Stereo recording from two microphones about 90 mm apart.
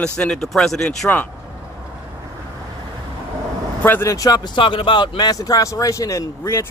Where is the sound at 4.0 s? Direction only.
35° left (ahead or behind).